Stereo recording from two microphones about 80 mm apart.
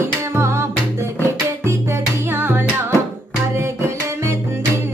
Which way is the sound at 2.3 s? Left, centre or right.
Right.